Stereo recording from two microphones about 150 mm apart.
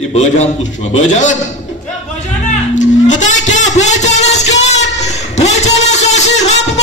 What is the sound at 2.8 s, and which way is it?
Music, 55° left (ahead or behind).